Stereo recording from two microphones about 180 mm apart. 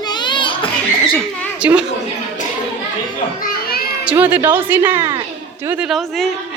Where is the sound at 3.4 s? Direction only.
60° left (ahead or behind).